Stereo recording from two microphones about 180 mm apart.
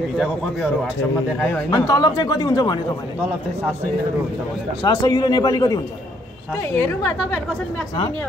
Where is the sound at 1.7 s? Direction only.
20° left (ahead or behind).